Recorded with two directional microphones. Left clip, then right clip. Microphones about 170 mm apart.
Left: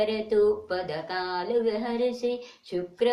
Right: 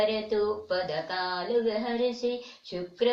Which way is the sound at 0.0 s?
20° left (ahead or behind).